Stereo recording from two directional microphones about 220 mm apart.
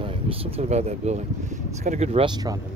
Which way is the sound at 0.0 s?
25° right (ahead or behind).